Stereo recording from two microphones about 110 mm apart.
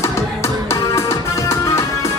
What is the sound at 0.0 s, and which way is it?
Music, 25° left (ahead or behind).